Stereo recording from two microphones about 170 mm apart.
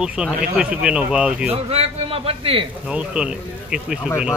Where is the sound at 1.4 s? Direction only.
35° right (ahead or behind).